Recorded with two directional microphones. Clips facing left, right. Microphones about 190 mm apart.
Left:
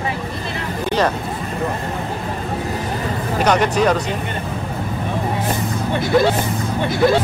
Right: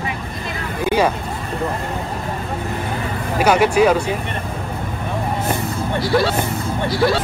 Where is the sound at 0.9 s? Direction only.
10° right (ahead or behind).